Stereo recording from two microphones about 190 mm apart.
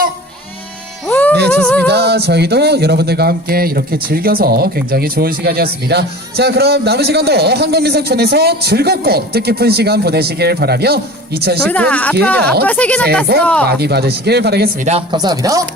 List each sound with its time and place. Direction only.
1.0 s music: 10° left (ahead or behind)
1.9 s speech: 60° right (ahead or behind)
11.7 s speech: 5° left (ahead or behind)
13.7 s speech: 60° right (ahead or behind)
14.8 s speech: 25° right (ahead or behind)